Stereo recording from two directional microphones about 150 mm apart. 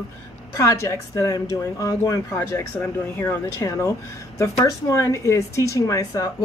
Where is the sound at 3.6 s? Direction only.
20° left (ahead or behind).